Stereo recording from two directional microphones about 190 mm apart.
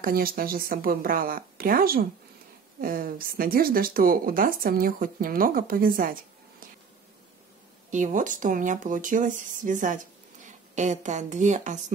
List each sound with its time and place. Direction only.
0.0 s speech: 50° right (ahead or behind)
7.9 s speech: 40° right (ahead or behind)